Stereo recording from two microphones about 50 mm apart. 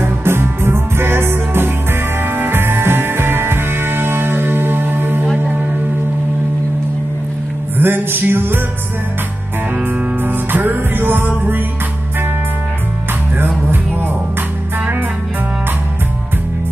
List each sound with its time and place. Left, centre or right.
0.0 s music: right
7.7 s music: right
10.2 s music: right